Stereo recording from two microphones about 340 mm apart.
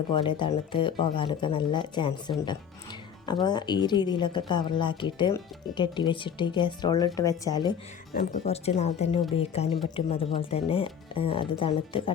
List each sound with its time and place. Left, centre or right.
0.1 s speech: centre
3.4 s speech: centre